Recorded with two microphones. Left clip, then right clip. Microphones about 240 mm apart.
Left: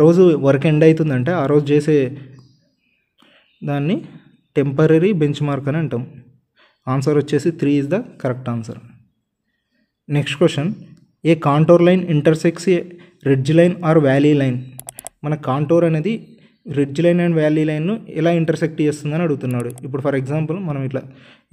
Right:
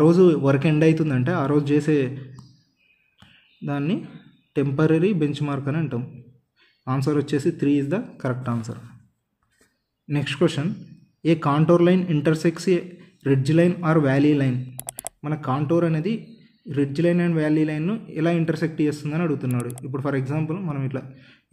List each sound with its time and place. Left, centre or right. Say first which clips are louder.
0.0 s speech: left 5 dB; left
3.6 s speech: left 5 dB; left
10.0 s speech: left 6 dB; left
14.8 s a sound: even; centre
15.2 s speech: left 6 dB; left